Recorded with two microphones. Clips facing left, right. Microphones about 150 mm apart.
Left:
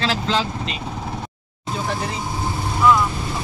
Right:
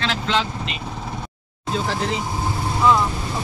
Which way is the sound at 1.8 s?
90° right.